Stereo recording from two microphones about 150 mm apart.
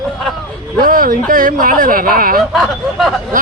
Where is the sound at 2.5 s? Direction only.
Centre (ahead or behind).